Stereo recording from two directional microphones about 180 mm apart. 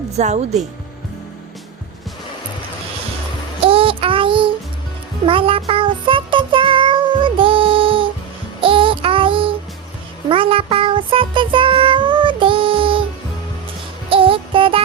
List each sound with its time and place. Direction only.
0.1 s speech: 40° right (ahead or behind)
3.6 s child singing: 30° right (ahead or behind)
5.2 s music: 30° right (ahead or behind)
8.6 s child singing: 30° right (ahead or behind)
10.2 s music: 30° right (ahead or behind)
14.1 s music: 30° right (ahead or behind)